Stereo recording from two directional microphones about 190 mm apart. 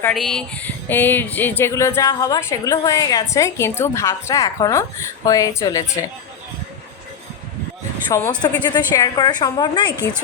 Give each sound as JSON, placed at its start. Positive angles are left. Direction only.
{"t": 0.1, "sound": "speech", "side_deg": 0}
{"t": 8.1, "sound": "a woman's voice", "side_deg": 15}